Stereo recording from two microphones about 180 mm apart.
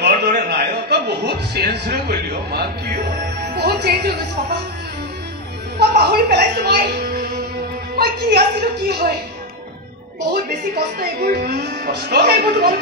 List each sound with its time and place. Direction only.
0.0 s a man's voice: 60° right (ahead or behind)
5.8 s a woman's voice: 65° right (ahead or behind)
11.0 s speech: 60° right (ahead or behind)